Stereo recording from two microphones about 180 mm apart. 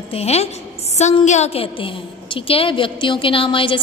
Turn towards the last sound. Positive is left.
turn(degrees=30)  # may be behind; listen again after turning